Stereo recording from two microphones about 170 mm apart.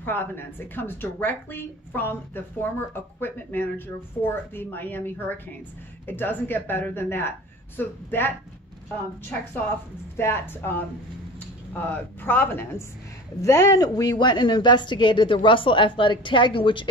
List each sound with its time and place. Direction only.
0.0 s a woman's voice: 10° left (ahead or behind)
10.1 s a woman's voice: 15° left (ahead or behind); by 16.8 s 30° left (ahead or behind)